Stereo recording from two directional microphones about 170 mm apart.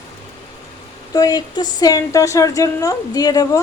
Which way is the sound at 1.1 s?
25° left (ahead or behind).